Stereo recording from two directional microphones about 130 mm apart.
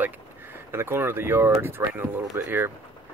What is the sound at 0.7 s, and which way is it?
Speech, 20° right (ahead or behind).